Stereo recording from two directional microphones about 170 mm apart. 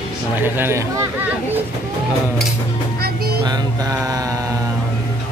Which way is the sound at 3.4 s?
20° right (ahead or behind).